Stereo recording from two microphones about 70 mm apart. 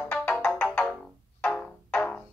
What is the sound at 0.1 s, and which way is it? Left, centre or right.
Music, left.